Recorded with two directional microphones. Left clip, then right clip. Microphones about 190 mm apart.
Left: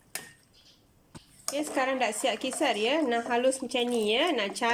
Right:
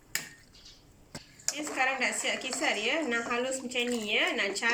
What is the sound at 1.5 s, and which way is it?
A woman's voice, 50° left (ahead or behind).